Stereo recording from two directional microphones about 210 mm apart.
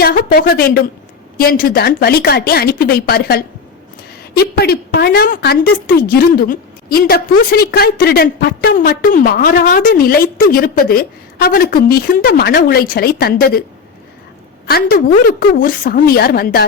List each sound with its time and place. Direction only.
0.0 s a woman's voice: 45° left (ahead or behind)
14.7 s a woman's voice: 45° left (ahead or behind)